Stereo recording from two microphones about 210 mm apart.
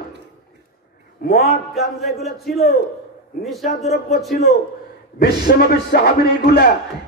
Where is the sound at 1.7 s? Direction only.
Centre (ahead or behind).